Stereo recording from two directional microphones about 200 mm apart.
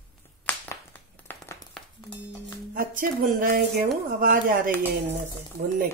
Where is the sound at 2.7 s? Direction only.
45° right (ahead or behind).